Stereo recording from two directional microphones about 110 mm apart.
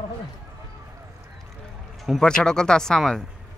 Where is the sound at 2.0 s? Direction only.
5° left (ahead or behind).